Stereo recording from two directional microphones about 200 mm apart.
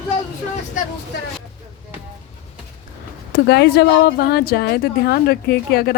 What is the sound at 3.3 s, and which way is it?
A woman's voice, 55° left (ahead or behind).